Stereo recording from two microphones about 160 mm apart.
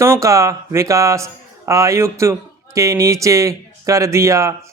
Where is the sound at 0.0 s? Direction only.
20° right (ahead or behind).